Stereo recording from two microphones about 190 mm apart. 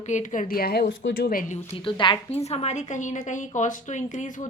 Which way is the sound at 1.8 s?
25° left (ahead or behind).